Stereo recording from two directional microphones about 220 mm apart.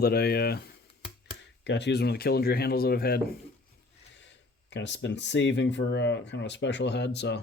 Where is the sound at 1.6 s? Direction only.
55° left (ahead or behind).